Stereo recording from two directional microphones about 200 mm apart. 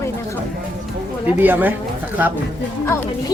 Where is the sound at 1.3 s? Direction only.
10° right (ahead or behind).